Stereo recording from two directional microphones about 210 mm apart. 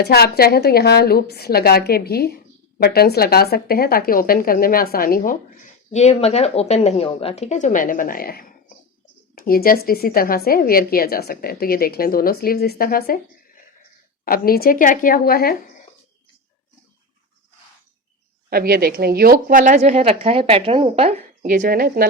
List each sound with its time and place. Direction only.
0.0 s a woman's voice: 50° left (ahead or behind)
14.3 s a woman's voice: 45° left (ahead or behind)
18.5 s a woman's voice: 45° right (ahead or behind); by 21.5 s 30° right (ahead or behind)
21.5 s speech: 45° right (ahead or behind)